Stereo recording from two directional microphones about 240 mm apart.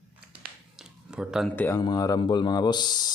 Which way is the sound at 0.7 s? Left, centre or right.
Centre.